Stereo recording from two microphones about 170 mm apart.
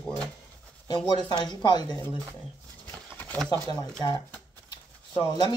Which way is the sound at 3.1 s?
10° left (ahead or behind).